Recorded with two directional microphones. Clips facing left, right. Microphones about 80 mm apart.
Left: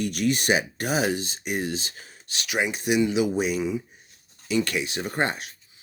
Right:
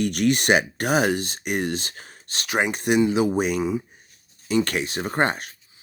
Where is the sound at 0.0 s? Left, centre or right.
Right.